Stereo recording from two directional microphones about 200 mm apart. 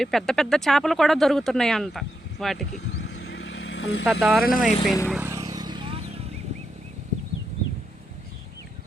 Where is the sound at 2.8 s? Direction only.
55° left (ahead or behind).